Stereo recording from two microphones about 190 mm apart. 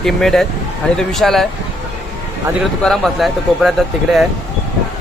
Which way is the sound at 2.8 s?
Centre (ahead or behind).